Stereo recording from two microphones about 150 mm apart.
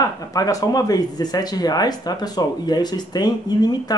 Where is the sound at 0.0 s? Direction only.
20° left (ahead or behind).